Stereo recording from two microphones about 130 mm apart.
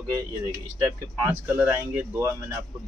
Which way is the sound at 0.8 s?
20° right (ahead or behind).